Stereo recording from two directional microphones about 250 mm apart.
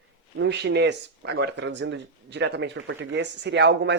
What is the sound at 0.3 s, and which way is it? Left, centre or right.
Speech, right.